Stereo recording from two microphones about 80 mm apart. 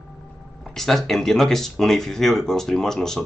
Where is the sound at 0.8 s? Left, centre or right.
Centre.